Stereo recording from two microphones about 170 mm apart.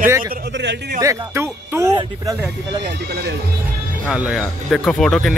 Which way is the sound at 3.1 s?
70° right (ahead or behind).